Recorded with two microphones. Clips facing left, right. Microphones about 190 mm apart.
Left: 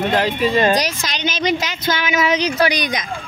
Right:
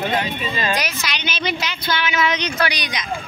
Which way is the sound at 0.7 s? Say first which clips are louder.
Left 5 dB; 40° left (ahead or behind).